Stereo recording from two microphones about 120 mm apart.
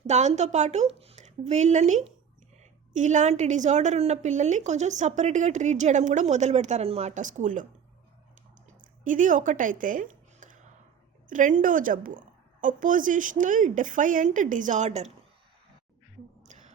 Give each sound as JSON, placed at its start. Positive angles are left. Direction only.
{"t": 0.1, "sound": "speech", "side_deg": -70}
{"t": 2.6, "sound": "a woman's voice", "side_deg": -90}
{"t": 7.1, "sound": "speech", "side_deg": -90}
{"t": 9.0, "sound": "a woman's voice", "side_deg": -90}
{"t": 16.5, "sound": "a sound", "side_deg": -80}